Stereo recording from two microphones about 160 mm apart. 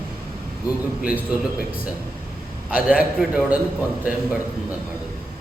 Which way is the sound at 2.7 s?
5° right (ahead or behind).